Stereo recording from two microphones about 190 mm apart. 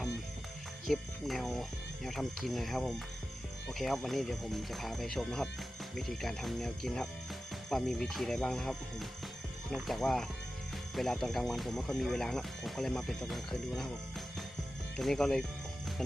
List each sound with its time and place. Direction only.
0.9 s speech: centre (ahead or behind)
14.9 s speech: centre (ahead or behind)